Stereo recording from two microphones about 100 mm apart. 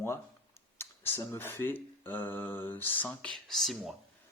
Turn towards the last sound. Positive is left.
turn(degrees=0)  # may be behind; listen again after turning